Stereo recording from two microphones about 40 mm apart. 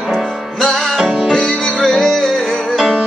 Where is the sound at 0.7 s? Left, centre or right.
Centre.